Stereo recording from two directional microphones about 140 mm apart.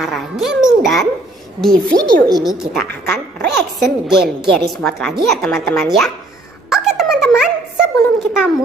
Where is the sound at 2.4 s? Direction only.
Centre (ahead or behind).